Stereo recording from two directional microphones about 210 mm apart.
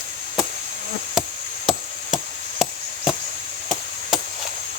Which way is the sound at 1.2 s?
Centre (ahead or behind).